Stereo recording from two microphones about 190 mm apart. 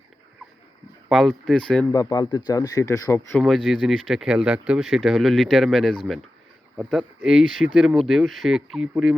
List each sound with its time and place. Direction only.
1.1 s speech: centre (ahead or behind)
1.9 s speech: 20° left (ahead or behind)
3.4 s speech: centre (ahead or behind)